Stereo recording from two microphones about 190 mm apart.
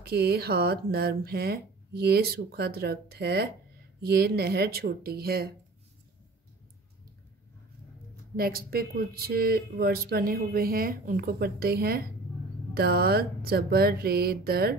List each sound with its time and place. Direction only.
0.0 s speech: 55° right (ahead or behind)
8.4 s speech: 50° right (ahead or behind)